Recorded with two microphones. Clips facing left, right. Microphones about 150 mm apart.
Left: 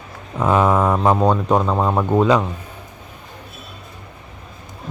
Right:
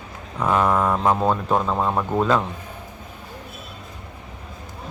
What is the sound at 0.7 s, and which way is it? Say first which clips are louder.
Speech: left 3 dB; 20° left (ahead or behind).